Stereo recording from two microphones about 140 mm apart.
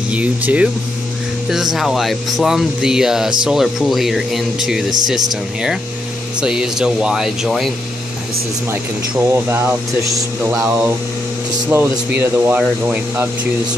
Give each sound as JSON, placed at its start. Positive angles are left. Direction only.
{"t": 0.1, "sound": "speech", "side_deg": -10}
{"t": 9.3, "sound": "speech", "side_deg": -15}